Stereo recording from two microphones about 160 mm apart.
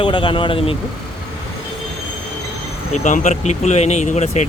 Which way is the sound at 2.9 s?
50° left (ahead or behind).